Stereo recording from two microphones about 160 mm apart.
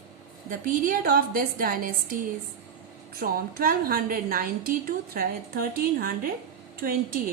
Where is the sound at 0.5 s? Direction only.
60° right (ahead or behind).